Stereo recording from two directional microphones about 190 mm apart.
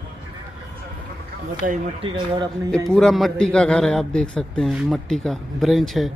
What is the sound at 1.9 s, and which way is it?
Speech, 25° right (ahead or behind).